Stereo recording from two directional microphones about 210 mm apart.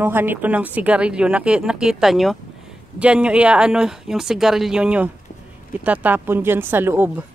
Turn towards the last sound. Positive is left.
turn(degrees=-10)  # may be behind; listen again after turning